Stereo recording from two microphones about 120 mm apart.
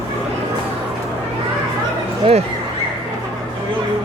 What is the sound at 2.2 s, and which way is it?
Speech, 60° right (ahead or behind).